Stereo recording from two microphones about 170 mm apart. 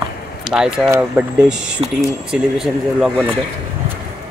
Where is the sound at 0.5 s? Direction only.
10° right (ahead or behind).